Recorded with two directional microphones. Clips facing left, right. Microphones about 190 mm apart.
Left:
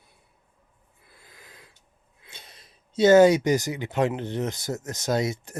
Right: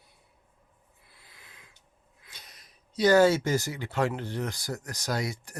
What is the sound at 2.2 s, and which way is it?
Speech, 25° left (ahead or behind).